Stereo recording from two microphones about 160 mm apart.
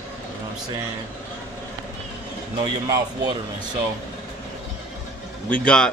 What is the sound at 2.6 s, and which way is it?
Speech, 25° right (ahead or behind).